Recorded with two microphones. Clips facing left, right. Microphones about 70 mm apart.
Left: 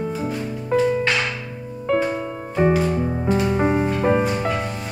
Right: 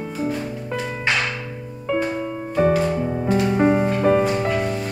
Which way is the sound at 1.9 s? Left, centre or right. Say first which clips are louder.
Left 2 dB; centre.